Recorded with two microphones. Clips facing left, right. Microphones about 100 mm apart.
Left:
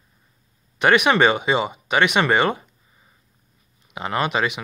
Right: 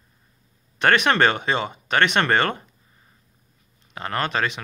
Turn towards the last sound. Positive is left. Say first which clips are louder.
# left 2 dB
turn(degrees=10)  # may be behind; listen again after turning